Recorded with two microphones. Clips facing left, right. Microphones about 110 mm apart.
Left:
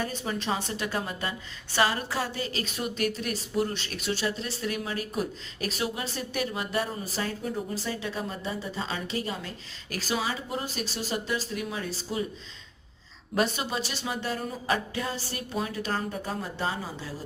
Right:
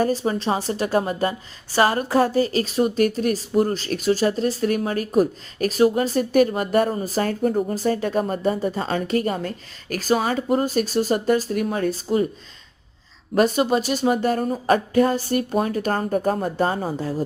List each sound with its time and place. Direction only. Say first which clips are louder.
0.0 s a woman's voice: right 10 dB; 35° right (ahead or behind)
13.3 s a woman's voice: right 10 dB; 45° right (ahead or behind)